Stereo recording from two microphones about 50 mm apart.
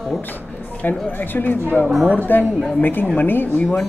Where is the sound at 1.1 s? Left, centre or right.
Left.